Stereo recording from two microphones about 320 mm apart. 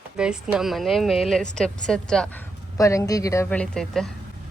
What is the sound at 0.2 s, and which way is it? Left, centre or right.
A woman's voice, centre.